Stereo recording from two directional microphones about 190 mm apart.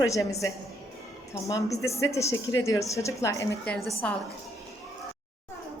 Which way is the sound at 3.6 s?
Centre (ahead or behind).